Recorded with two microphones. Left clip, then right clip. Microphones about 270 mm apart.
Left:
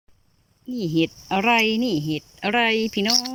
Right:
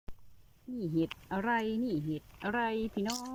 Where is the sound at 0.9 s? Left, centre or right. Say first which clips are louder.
Left 12 dB; centre.